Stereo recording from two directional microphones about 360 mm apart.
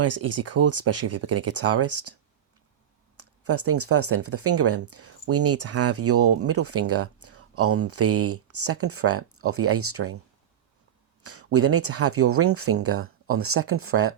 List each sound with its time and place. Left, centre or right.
0.0 s speech: right
3.2 s speech: right
11.2 s speech: right